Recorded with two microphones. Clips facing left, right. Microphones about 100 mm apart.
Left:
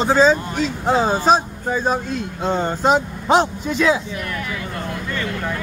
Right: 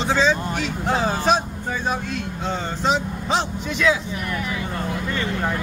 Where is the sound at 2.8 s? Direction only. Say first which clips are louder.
Left 4 dB; 50° left (ahead or behind).